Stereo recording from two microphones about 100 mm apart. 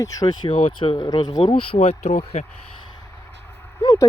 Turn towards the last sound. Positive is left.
turn(degrees=40)  # may be behind; listen again after turning